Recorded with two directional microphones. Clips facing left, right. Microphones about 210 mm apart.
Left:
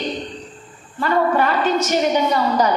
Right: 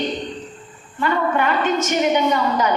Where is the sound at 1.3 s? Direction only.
35° left (ahead or behind).